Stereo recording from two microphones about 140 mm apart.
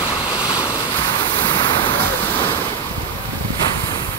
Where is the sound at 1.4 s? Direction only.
35° left (ahead or behind).